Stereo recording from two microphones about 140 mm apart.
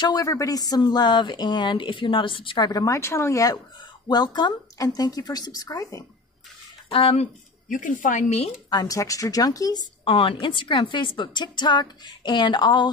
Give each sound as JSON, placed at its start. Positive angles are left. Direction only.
{"t": 0.0, "sound": "speech", "side_deg": 25}
{"t": 6.9, "sound": "speech", "side_deg": 40}
{"t": 7.6, "sound": "speech", "side_deg": 70}
{"t": 8.6, "sound": "speech", "side_deg": 25}